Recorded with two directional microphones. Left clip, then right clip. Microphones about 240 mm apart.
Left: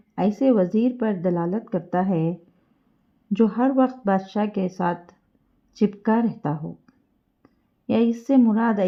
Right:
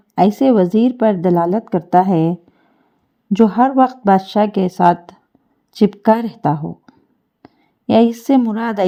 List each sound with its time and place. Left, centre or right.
0.1 s a woman's voice: right